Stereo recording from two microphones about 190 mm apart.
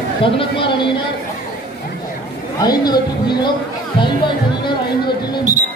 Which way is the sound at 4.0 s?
25° left (ahead or behind).